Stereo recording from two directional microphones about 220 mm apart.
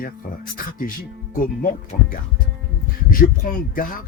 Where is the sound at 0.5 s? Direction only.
40° left (ahead or behind).